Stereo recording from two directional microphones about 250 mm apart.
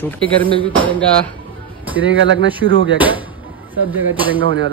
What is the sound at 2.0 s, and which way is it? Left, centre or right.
Speech, right.